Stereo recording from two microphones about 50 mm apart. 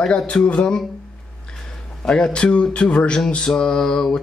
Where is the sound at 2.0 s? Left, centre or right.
Centre.